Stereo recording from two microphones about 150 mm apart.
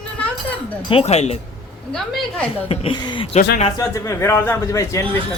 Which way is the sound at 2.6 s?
40° left (ahead or behind).